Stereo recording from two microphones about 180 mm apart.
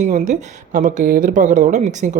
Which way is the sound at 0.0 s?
45° right (ahead or behind).